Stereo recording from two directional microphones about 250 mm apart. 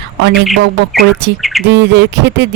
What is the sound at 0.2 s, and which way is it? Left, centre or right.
Speech, right.